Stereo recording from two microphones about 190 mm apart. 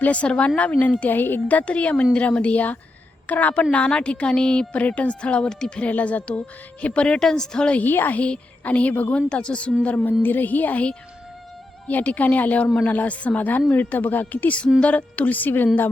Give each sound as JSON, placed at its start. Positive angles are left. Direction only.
{"t": 0.0, "sound": "a woman's voice", "side_deg": 5}